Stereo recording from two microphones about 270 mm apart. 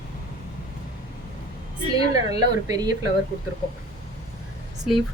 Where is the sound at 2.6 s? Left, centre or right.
Centre.